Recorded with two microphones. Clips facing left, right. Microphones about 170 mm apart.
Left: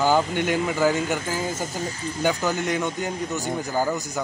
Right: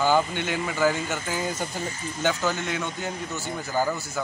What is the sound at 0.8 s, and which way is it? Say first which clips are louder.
Speech: right 1 dB; 15° left (ahead or behind).